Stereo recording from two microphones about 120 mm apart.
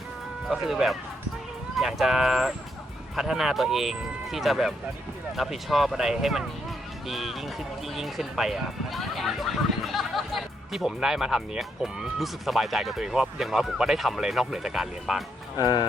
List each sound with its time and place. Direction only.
0.4 s speech: centre (ahead or behind)
15.5 s speech: 35° left (ahead or behind)